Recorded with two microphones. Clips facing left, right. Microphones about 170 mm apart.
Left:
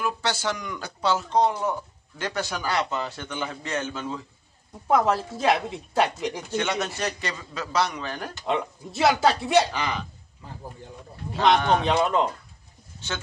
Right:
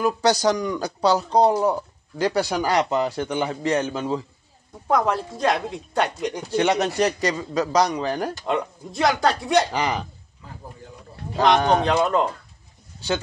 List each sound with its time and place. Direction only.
0.0 s speech: 40° right (ahead or behind)
4.8 s speech: 5° left (ahead or behind)
6.4 s speech: 35° right (ahead or behind)
8.5 s speech: centre (ahead or behind)
9.7 s speech: 35° right (ahead or behind)
11.8 s speech: centre (ahead or behind)